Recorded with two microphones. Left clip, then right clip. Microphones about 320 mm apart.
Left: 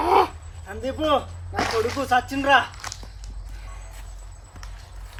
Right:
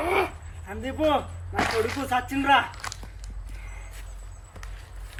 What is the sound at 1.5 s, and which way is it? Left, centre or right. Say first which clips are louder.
Speech: left 2 dB; left.